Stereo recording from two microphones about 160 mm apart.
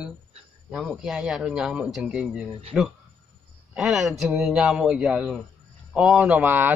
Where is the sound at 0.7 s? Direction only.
Centre (ahead or behind).